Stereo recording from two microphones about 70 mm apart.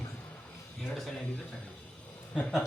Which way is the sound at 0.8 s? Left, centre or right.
Centre.